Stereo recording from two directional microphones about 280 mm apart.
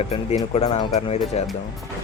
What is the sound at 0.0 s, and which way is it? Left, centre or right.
Speech, left.